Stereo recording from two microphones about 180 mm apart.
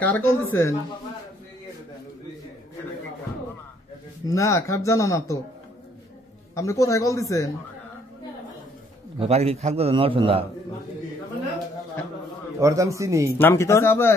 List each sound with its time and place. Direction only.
0.0 s speech: 10° left (ahead or behind)
4.3 s speech: 15° left (ahead or behind)
6.5 s speech: 15° left (ahead or behind)
9.2 s a man's voice: 35° right (ahead or behind)
12.5 s a man's voice: 15° right (ahead or behind)
13.4 s speech: 15° left (ahead or behind)